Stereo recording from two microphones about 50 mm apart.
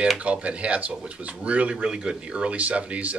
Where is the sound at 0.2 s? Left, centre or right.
Right.